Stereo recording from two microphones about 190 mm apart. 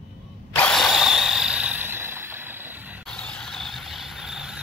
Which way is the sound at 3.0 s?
5° left (ahead or behind).